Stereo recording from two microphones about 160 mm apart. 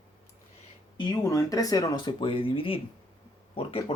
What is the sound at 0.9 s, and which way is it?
Speech, 25° left (ahead or behind).